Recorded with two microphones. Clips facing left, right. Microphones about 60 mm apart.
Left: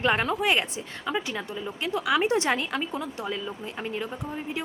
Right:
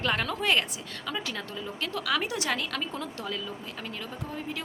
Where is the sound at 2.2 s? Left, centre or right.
Left.